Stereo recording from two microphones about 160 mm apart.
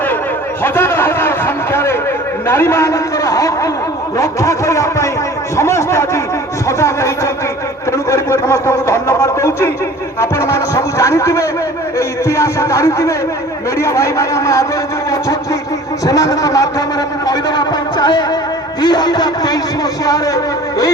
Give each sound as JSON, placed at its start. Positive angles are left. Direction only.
{"t": 0.6, "sound": "a sound", "side_deg": 15}
{"t": 2.5, "sound": "a man's voice", "side_deg": 15}
{"t": 16.0, "sound": "a man's voice", "side_deg": 20}